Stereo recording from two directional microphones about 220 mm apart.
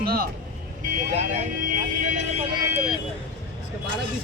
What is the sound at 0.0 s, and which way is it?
Speech, 45° right (ahead or behind).